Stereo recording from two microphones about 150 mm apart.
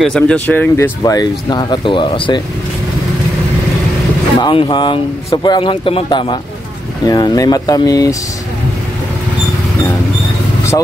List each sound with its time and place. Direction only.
0.0 s speech: 5° left (ahead or behind); by 2.4 s 35° left (ahead or behind)
4.4 s speech: 35° left (ahead or behind)